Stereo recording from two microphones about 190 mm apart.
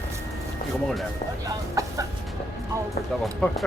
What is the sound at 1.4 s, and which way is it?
Chicken, 15° right (ahead or behind).